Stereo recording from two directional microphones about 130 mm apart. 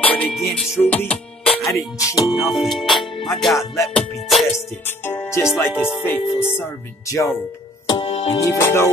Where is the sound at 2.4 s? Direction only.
Centre (ahead or behind).